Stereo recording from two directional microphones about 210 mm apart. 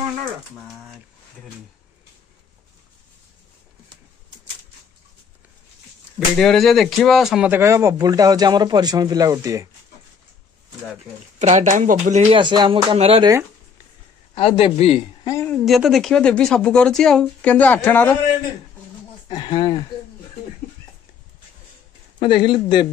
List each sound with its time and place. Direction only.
6.1 s speech: centre (ahead or behind); by 9.7 s 15° right (ahead or behind)
11.3 s speech: 35° right (ahead or behind)
14.3 s a man's voice: 25° left (ahead or behind)
15.2 s speech: 15° left (ahead or behind)
15.5 s speech: centre (ahead or behind)
19.2 s speech: 25° left (ahead or behind)
22.2 s a man's voice: 25° left (ahead or behind)